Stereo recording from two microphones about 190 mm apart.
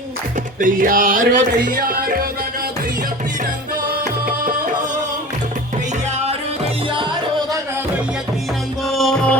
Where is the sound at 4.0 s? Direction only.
45° right (ahead or behind).